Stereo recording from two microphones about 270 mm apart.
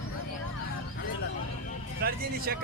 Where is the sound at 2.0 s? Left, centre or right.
Right.